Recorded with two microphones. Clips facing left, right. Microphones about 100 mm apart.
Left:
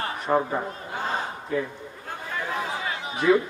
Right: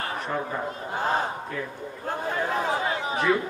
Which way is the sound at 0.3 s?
20° left (ahead or behind).